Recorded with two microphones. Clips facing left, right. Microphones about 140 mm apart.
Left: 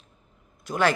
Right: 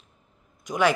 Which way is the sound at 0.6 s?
15° right (ahead or behind).